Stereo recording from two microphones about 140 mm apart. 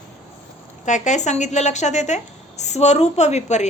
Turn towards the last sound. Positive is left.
turn(degrees=55)  # may be behind; listen again after turning